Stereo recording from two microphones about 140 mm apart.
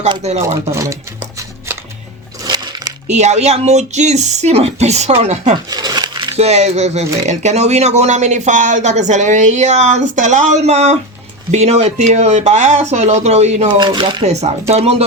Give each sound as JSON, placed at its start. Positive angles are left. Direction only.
{"t": 0.2, "sound": "speech", "side_deg": -50}
{"t": 0.4, "sound": "speech", "side_deg": -20}
{"t": 1.4, "sound": "music", "side_deg": -15}
{"t": 2.4, "sound": "a sound", "side_deg": -30}
{"t": 3.1, "sound": "speech", "side_deg": -55}
{"t": 5.6, "sound": "crumpling", "side_deg": -30}
{"t": 6.3, "sound": "speech", "side_deg": -50}
{"t": 13.7, "sound": "speech", "side_deg": -35}
{"t": 14.7, "sound": "speech", "side_deg": -45}